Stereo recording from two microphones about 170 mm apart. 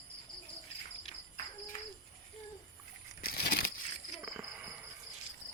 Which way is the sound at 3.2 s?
65° left (ahead or behind).